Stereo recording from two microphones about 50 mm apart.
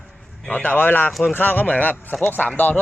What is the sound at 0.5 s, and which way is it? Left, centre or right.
Speech, left.